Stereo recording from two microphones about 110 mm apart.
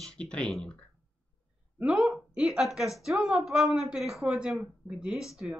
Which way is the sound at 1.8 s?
10° right (ahead or behind).